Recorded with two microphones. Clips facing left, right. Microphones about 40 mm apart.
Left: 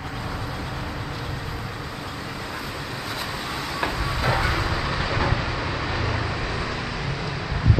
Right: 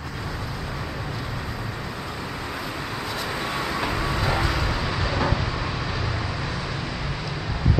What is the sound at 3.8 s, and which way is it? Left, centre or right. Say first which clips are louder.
Vehicle: left 4 dB; centre.